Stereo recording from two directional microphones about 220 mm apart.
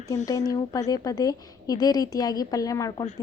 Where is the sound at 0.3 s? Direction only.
15° left (ahead or behind).